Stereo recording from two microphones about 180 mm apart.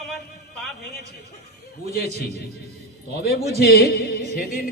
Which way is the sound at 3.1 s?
60° left (ahead or behind).